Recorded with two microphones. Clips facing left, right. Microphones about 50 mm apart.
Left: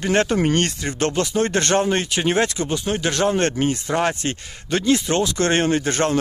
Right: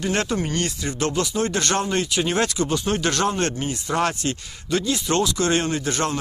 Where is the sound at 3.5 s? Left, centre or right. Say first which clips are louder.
Left 7 dB; left.